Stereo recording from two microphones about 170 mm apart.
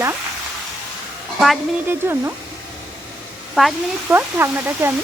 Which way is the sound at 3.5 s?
Centre (ahead or behind).